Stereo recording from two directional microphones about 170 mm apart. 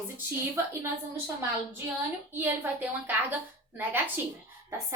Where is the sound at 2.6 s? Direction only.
10° right (ahead or behind).